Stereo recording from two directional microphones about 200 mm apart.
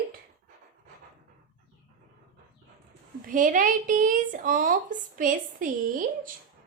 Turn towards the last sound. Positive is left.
turn(degrees=-40)  # may be behind; listen again after turning